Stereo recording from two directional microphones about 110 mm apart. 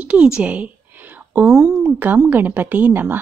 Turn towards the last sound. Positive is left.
turn(degrees=-20)  # may be behind; listen again after turning